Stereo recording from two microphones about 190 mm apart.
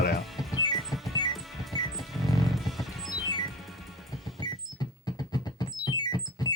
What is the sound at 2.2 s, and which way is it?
Music, centre (ahead or behind).